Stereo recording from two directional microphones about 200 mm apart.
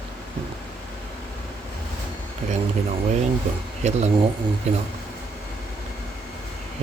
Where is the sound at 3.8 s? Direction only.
35° right (ahead or behind).